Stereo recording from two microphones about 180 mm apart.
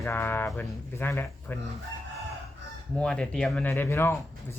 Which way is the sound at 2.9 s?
5° left (ahead or behind).